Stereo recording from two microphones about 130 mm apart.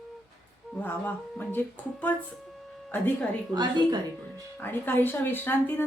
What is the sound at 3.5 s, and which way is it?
Speech, 35° right (ahead or behind).